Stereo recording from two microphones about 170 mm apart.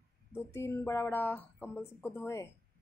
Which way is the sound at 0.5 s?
15° left (ahead or behind).